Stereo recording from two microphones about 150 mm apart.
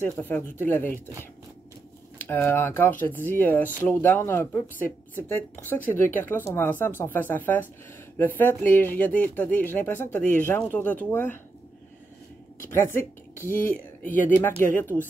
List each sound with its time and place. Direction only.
0.1 s speech: 10° left (ahead or behind)
2.1 s speech: 15° left (ahead or behind)
12.6 s speech: 15° left (ahead or behind)